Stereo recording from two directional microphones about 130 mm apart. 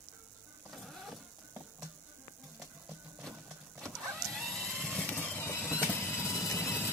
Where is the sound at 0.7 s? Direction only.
Centre (ahead or behind).